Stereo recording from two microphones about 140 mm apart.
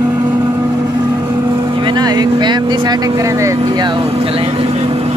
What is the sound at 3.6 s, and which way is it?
Vehicle, 30° right (ahead or behind).